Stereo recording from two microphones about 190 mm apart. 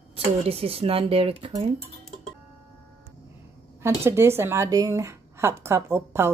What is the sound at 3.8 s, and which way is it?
Speech, 15° right (ahead or behind).